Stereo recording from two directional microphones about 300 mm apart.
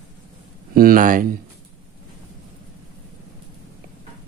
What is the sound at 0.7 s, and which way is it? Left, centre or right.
Speech, right.